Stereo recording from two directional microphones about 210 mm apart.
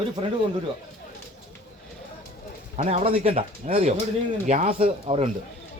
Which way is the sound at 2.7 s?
30° right (ahead or behind).